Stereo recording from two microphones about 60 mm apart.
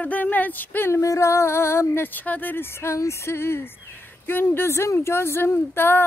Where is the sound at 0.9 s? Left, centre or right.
Left.